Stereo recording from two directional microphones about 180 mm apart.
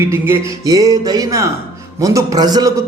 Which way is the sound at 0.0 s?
15° right (ahead or behind).